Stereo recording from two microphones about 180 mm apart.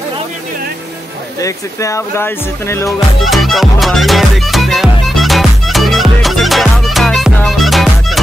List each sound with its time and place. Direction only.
1.4 s speech: 15° left (ahead or behind)
3.3 s music: centre (ahead or behind)